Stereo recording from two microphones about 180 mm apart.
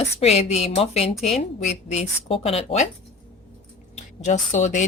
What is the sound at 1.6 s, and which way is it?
Speech, 40° left (ahead or behind).